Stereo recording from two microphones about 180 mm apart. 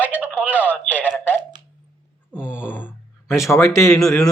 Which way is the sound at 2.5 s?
10° left (ahead or behind).